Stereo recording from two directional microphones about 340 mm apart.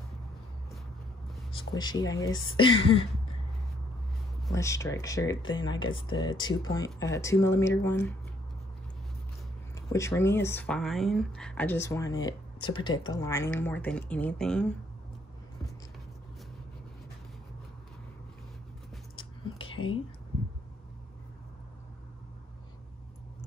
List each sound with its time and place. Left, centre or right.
1.5 s speech: centre
4.5 s speech: centre
9.8 s speech: centre
19.7 s whispering: left